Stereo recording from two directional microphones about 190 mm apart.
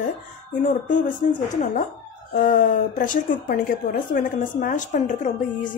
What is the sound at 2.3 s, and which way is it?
A woman's voice, 40° left (ahead or behind).